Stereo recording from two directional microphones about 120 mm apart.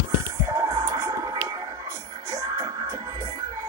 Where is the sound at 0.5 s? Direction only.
25° right (ahead or behind).